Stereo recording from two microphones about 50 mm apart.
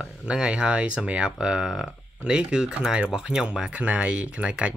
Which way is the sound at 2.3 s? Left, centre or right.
Centre.